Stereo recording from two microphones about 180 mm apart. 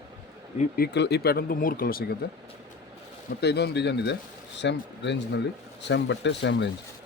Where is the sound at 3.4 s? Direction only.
65° left (ahead or behind).